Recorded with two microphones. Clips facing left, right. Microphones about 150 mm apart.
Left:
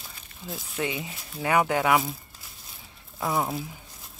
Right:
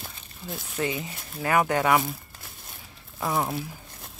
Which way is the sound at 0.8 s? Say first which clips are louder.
Right 3 dB; 20° left (ahead or behind).